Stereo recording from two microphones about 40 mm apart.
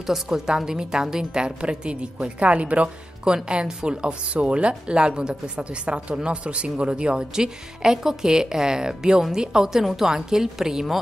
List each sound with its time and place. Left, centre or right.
0.0 s a woman's voice: centre